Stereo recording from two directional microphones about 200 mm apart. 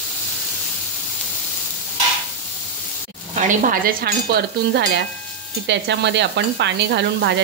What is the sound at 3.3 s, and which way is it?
Stir, 40° right (ahead or behind).